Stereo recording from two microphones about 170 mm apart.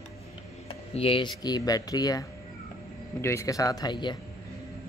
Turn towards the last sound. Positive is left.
turn(degrees=25)  # may be behind; listen again after turning